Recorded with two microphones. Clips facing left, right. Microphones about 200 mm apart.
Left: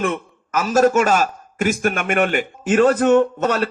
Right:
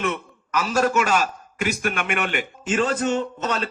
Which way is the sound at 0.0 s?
45° left (ahead or behind).